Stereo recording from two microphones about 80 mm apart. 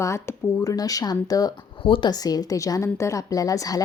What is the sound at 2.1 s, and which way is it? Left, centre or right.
Speech, left.